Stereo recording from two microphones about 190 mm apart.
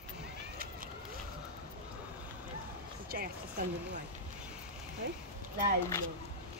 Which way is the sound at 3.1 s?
50° right (ahead or behind).